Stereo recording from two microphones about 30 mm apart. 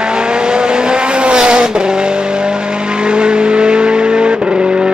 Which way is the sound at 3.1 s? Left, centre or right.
Right.